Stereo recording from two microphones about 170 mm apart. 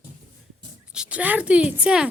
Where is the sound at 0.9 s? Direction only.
5° right (ahead or behind).